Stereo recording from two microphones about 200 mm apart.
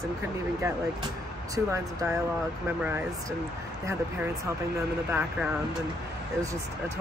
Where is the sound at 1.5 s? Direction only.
15° right (ahead or behind).